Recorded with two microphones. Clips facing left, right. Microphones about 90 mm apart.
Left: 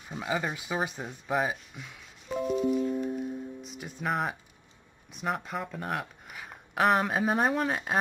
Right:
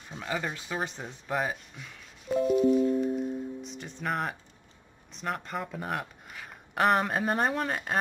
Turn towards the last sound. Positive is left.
turn(degrees=5)  # may be behind; listen again after turning